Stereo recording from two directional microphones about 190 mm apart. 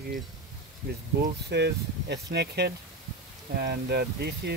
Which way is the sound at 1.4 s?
60° right (ahead or behind).